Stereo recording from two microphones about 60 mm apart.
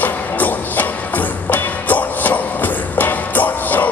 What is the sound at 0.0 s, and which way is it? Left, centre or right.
Music, left.